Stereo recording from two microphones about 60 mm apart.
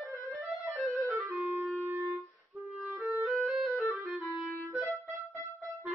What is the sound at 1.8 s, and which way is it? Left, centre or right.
Music, right.